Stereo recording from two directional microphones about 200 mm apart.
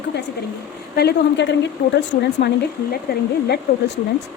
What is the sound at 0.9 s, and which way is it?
A woman's voice, 60° left (ahead or behind).